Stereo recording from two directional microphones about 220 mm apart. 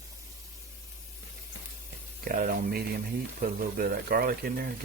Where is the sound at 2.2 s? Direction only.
40° right (ahead or behind).